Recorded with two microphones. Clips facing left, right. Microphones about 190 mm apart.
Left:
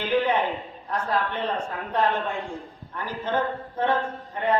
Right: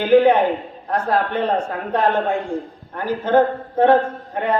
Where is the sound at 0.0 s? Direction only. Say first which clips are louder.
Right 10 dB; 55° right (ahead or behind).